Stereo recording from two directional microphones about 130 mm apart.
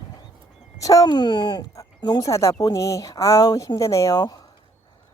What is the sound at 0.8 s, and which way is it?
Speech, 25° left (ahead or behind).